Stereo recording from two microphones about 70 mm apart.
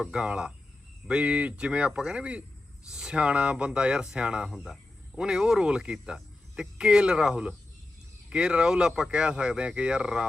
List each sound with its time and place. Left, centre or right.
0.0 s speech: centre